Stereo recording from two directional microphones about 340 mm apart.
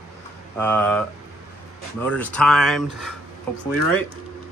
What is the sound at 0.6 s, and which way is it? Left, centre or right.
Speech, centre.